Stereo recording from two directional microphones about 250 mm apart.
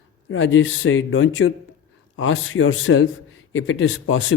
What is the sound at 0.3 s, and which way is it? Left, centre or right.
Speech, left.